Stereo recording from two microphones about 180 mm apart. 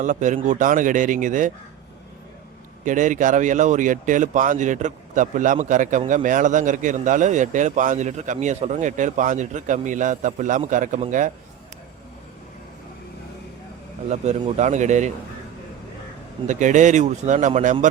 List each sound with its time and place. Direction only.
0.0 s speech: 45° right (ahead or behind)
2.8 s speech: 45° right (ahead or behind)
14.1 s speech: 40° right (ahead or behind)
16.5 s speech: 45° right (ahead or behind)